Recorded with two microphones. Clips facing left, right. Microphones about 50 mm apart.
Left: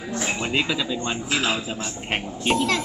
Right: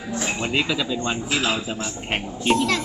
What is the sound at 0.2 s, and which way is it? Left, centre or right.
A man's voice, centre.